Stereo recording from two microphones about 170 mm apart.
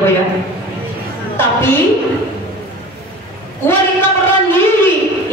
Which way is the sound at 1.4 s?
15° left (ahead or behind).